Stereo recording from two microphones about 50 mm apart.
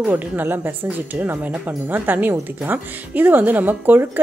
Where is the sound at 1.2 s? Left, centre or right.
Right.